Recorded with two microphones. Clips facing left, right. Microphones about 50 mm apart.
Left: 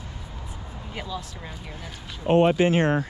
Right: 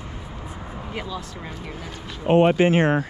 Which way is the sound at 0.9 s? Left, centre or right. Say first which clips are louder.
Right 2 dB; centre.